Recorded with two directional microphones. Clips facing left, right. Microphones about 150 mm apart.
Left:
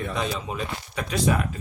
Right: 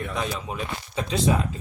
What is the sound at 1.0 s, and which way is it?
Speech, 25° right (ahead or behind).